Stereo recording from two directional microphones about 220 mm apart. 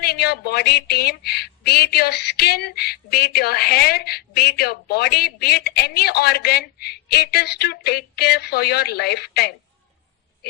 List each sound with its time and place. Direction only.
0.0 s speech: 45° left (ahead or behind)